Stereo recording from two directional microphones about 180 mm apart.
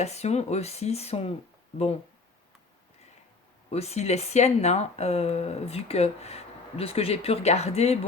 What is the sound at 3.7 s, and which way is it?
Speech, 35° left (ahead or behind).